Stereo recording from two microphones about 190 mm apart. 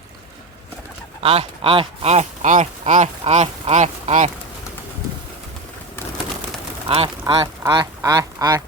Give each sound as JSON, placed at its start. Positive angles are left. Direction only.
{"t": 1.2, "sound": "speech", "side_deg": -30}
{"t": 6.8, "sound": "speech", "side_deg": -30}
{"t": 7.6, "sound": "duck", "side_deg": -15}